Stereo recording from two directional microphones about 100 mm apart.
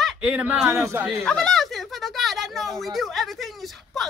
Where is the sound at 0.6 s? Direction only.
25° right (ahead or behind).